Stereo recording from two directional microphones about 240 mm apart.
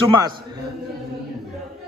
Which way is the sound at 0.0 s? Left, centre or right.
Centre.